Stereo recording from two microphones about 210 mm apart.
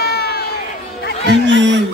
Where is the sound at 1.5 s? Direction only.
60° right (ahead or behind).